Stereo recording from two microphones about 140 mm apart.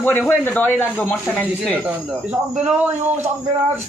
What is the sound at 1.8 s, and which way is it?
Speech, 10° right (ahead or behind).